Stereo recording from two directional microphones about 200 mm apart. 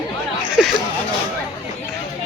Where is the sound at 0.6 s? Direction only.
Centre (ahead or behind).